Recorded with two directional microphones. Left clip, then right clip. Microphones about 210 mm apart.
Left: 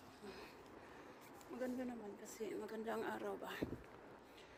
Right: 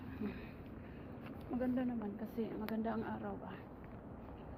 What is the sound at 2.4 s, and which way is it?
A woman's voice, 50° left (ahead or behind).